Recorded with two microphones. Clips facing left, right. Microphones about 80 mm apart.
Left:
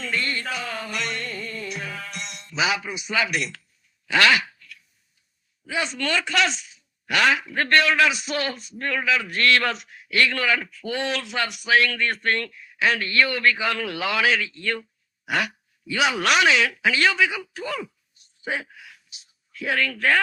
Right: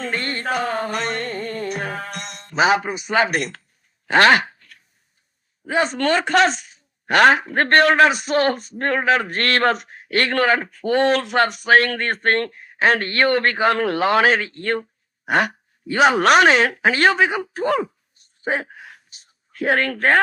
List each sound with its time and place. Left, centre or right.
0.0 s music: right
4.0 s a sound: right
5.6 s speech: right